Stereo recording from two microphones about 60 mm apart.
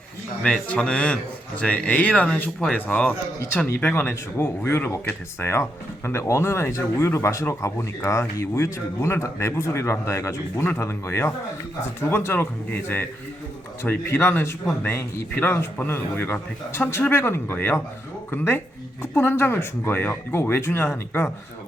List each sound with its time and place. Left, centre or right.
0.4 s speech: left
3.9 s speech: left
6.1 s speech: left
19.1 s speech: left